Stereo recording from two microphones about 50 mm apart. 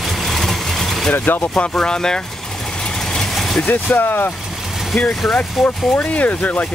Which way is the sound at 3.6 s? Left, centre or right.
Left.